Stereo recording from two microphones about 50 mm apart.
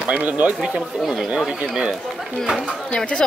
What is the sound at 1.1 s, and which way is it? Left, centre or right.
Speech, centre.